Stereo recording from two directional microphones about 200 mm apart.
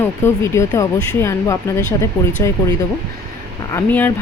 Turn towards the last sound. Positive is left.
turn(degrees=10)  # may be behind; listen again after turning